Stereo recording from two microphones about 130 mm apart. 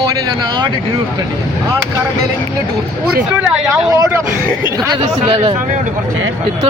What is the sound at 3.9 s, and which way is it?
Speech, 25° right (ahead or behind).